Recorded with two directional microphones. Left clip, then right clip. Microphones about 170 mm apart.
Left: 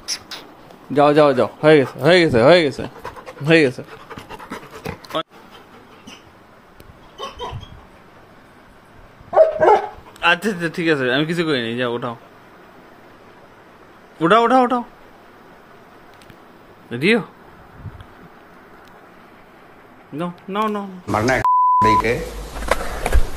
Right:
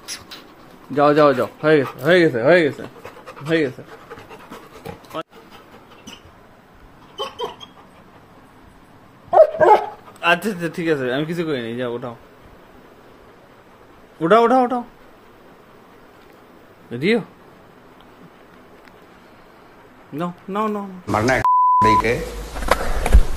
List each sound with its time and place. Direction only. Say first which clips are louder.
0.0 s a sound: left 5 dB; 20° left (ahead or behind)
0.9 s a man's voice: left 1 dB; 20° left (ahead or behind)
2.0 s speech: left 2 dB; 35° left (ahead or behind)
3.0 s pant: left 4 dB; 45° left (ahead or behind)
5.2 s a sound: left 5 dB; 20° left (ahead or behind)
10.2 s a man's voice: left 1 dB; centre (ahead or behind)
14.2 s a man's voice: even; 10° left (ahead or behind)
16.9 s speech: left 2 dB; 5° left (ahead or behind)
20.2 s beep: left 1 dB; centre (ahead or behind)